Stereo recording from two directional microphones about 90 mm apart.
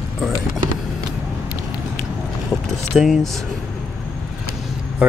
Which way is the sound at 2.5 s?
Centre (ahead or behind).